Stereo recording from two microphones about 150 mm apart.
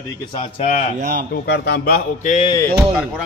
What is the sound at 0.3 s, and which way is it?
Speech, 35° left (ahead or behind).